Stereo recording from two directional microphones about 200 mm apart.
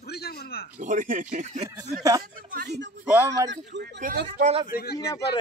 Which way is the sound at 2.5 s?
55° right (ahead or behind).